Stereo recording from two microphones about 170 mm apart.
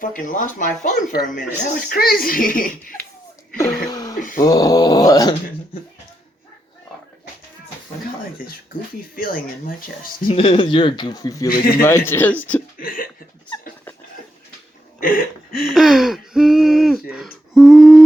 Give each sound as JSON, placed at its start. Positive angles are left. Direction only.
{"t": 0.0, "sound": "speech", "side_deg": 50}
{"t": 3.8, "sound": "a sound", "side_deg": 20}
{"t": 4.2, "sound": "a sound", "side_deg": 55}
{"t": 4.4, "sound": "speech", "side_deg": 20}
{"t": 9.1, "sound": "speech", "side_deg": 55}
{"t": 10.2, "sound": "speech", "side_deg": 35}
{"t": 11.4, "sound": "speech", "side_deg": 60}
{"t": 11.8, "sound": "speech", "side_deg": 15}
{"t": 12.8, "sound": "speech", "side_deg": 55}
{"t": 15.0, "sound": "a sound", "side_deg": 55}
{"t": 15.7, "sound": "speech", "side_deg": 0}
{"t": 17.5, "sound": "a sound", "side_deg": 0}